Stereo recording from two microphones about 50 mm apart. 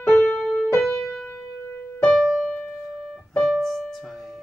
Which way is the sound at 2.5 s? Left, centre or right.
Left.